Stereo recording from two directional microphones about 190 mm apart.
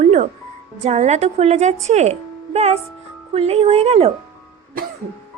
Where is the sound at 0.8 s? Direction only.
35° right (ahead or behind).